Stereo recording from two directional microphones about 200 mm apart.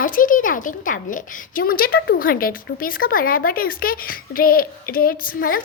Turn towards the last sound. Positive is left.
turn(degrees=45)  # may be behind; listen again after turning